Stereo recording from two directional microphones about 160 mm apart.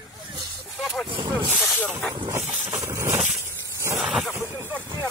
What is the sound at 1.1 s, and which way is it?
Snake, 30° right (ahead or behind).